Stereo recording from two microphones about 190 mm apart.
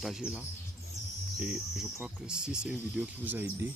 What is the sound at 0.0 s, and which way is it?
Speech, 5° right (ahead or behind).